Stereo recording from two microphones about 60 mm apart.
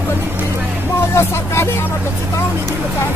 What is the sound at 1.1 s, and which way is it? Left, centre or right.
Vehicle, left.